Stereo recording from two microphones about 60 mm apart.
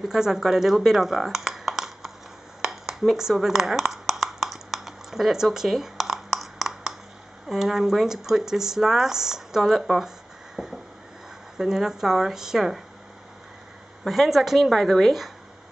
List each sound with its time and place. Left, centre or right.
0.0 s speech: centre
2.6 s a sound: centre
7.4 s speech: centre
14.0 s a woman's voice: centre